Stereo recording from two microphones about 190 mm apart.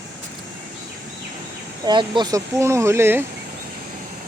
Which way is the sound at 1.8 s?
25° right (ahead or behind).